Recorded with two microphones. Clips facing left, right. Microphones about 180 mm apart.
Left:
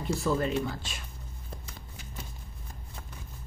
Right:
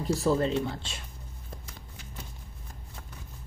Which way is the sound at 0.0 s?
35° right (ahead or behind).